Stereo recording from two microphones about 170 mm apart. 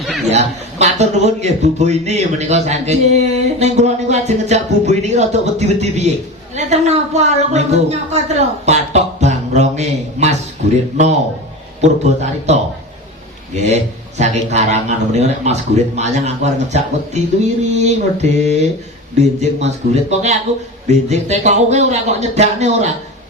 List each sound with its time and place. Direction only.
0.0 s chuckle: centre (ahead or behind)
0.3 s speech: 40° right (ahead or behind)
11.8 s speech: 40° right (ahead or behind)
13.6 s speech: 40° right (ahead or behind)